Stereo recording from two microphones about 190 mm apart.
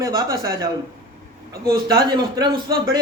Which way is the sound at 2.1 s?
20° right (ahead or behind).